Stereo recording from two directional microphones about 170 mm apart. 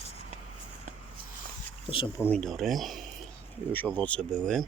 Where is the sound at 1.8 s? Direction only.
30° left (ahead or behind).